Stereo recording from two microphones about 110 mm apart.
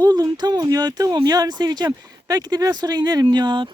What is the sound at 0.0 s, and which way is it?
Speech, 40° right (ahead or behind).